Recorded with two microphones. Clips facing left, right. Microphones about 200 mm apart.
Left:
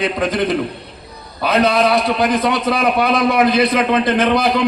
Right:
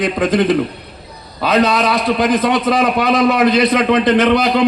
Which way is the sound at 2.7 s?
55° left (ahead or behind).